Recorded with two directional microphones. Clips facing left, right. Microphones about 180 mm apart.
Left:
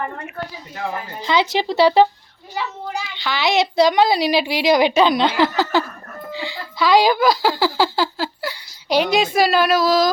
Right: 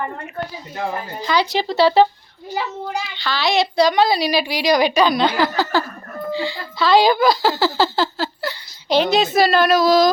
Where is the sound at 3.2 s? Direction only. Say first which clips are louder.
Left 1 dB; 20° left (ahead or behind).